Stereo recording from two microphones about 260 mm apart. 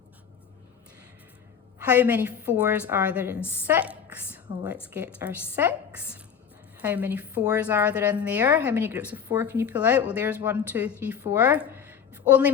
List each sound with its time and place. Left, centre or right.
1.8 s a woman's voice: centre